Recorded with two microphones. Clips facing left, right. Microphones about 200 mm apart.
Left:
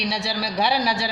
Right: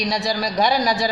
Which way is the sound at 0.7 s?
45° right (ahead or behind).